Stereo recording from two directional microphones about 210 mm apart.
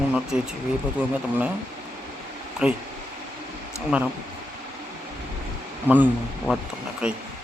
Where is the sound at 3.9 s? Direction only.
5° right (ahead or behind).